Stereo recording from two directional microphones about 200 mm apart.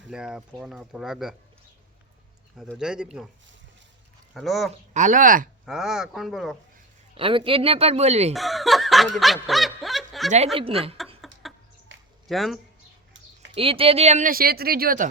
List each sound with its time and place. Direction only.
0.1 s speech: 5° right (ahead or behind)
2.6 s speech: centre (ahead or behind)
4.4 s speech: centre (ahead or behind)
4.9 s speech: 40° right (ahead or behind)
5.6 s speech: 5° right (ahead or behind)
7.2 s a woman's voice: 25° right (ahead or behind)
8.3 s snicker: centre (ahead or behind)
11.2 s chicken: centre (ahead or behind)
11.9 s a sound: 70° right (ahead or behind)
12.3 s speech: centre (ahead or behind)
13.5 s speech: 25° right (ahead or behind); by 15.0 s 45° right (ahead or behind)